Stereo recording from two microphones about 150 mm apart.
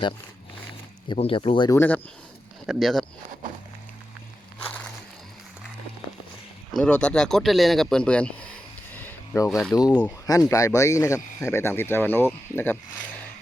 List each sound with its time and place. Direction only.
1.0 s speech: 35° left (ahead or behind)
1.7 s speech: 15° left (ahead or behind)
2.6 s speech: centre (ahead or behind)
4.6 s a sound: 10° left (ahead or behind)
6.7 s speech: 5° left (ahead or behind)
9.0 s a sound: 15° left (ahead or behind)
9.5 s speech: centre (ahead or behind)
9.7 s speech: 25° left (ahead or behind)